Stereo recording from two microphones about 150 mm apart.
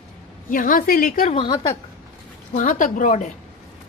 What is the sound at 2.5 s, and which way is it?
Speech, 60° left (ahead or behind).